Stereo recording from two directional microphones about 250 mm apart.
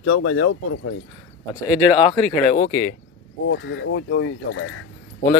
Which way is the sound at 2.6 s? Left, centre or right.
Left.